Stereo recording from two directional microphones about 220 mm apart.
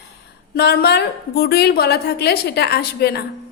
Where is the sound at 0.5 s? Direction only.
45° left (ahead or behind).